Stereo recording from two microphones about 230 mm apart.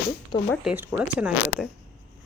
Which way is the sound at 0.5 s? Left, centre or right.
Centre.